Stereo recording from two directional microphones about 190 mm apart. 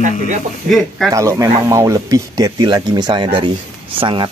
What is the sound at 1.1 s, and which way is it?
Speech, 15° right (ahead or behind).